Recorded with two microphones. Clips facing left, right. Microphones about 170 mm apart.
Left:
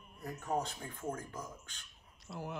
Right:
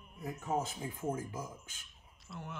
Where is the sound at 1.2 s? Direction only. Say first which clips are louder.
Right 3 dB; 5° right (ahead or behind).